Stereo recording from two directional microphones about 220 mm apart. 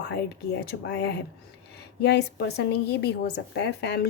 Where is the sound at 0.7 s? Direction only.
50° left (ahead or behind).